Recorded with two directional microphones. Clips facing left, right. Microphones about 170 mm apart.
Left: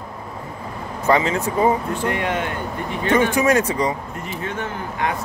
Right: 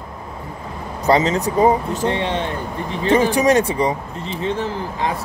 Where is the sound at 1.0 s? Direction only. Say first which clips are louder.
Right 2 dB; 35° right (ahead or behind).